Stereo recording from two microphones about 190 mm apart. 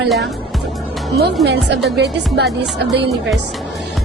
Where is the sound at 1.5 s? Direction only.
60° right (ahead or behind).